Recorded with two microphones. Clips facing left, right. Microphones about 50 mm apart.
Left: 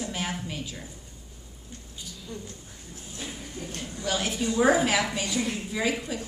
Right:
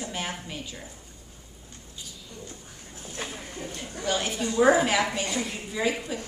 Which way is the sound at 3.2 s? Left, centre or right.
Right.